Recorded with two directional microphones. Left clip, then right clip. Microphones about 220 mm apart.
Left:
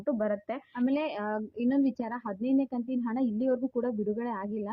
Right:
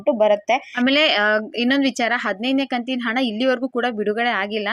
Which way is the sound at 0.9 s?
15° right (ahead or behind).